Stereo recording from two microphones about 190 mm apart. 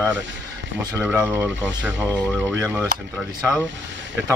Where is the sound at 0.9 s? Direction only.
10° right (ahead or behind).